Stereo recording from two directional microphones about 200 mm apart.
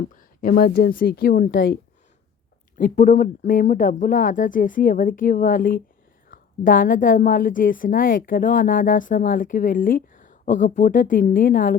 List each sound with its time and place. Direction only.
0.1 s a woman's voice: 45° left (ahead or behind)